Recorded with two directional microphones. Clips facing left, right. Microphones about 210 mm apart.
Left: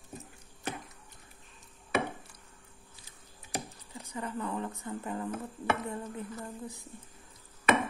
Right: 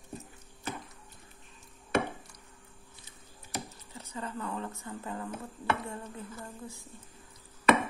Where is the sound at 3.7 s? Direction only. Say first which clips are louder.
Left 1 dB; 15° left (ahead or behind).